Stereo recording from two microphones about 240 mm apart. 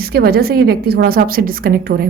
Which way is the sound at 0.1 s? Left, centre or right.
Right.